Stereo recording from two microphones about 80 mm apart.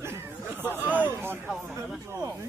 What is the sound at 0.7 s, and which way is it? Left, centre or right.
Speech, right.